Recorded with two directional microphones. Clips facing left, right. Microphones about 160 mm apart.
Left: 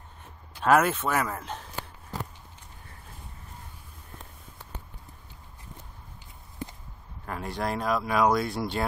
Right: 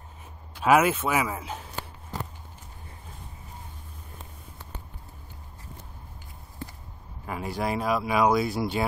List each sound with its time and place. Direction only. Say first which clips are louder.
0.6 s speech: right 1 dB; 5° right (ahead or behind)
6.6 s a sound: left 2 dB; 15° left (ahead or behind)
7.2 s speech: right 2 dB; 5° right (ahead or behind)